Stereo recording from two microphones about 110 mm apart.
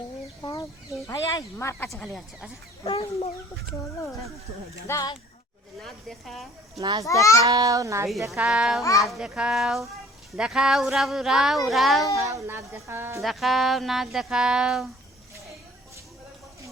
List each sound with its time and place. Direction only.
0.4 s speech: 30° left (ahead or behind)
4.9 s a child's voice: 30° left (ahead or behind)
5.8 s speech: centre (ahead or behind)
6.7 s a child's voice: 40° right (ahead or behind)
7.1 s a child's voice: 30° left (ahead or behind)
7.4 s a child's voice: 35° right (ahead or behind)
8.4 s a child's voice: 5° right (ahead or behind)
8.8 s a child's voice: 30° left (ahead or behind)
9.0 s speech: 5° right (ahead or behind)
12.1 s a woman's voice: 30° right (ahead or behind)
13.2 s speech: centre (ahead or behind)